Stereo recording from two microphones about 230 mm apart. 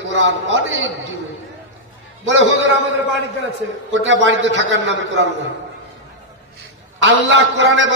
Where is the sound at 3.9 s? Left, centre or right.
Right.